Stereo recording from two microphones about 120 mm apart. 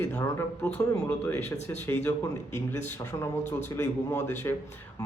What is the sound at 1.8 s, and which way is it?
Speech, 20° left (ahead or behind).